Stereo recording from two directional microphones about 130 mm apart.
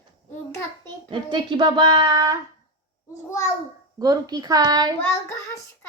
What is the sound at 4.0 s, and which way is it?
Speech, 30° right (ahead or behind).